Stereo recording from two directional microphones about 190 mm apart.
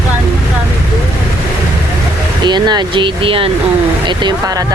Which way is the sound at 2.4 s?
25° right (ahead or behind).